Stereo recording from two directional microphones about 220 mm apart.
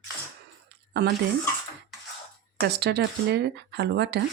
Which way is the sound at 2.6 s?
45° right (ahead or behind).